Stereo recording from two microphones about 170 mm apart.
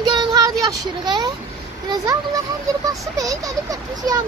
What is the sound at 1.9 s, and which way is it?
Speech, 25° right (ahead or behind).